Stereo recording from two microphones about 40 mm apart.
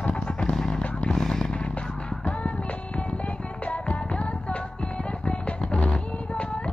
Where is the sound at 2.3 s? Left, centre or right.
Left.